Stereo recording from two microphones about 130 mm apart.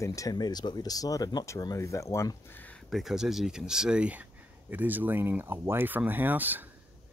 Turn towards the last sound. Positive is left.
turn(degrees=-15)  # may be behind; listen again after turning